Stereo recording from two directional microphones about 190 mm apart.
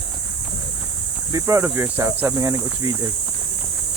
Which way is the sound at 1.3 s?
15° right (ahead or behind).